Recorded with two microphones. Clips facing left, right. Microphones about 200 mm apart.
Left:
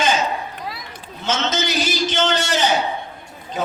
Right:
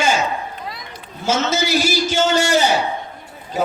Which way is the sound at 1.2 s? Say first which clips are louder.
Right 3 dB; 10° right (ahead or behind).